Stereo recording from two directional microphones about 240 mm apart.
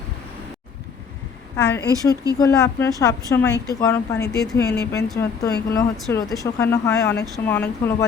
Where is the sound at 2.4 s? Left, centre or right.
Centre.